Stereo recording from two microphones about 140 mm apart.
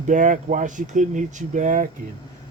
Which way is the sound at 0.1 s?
65° right (ahead or behind).